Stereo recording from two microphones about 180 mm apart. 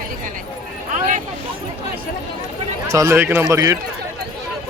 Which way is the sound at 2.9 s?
15° right (ahead or behind).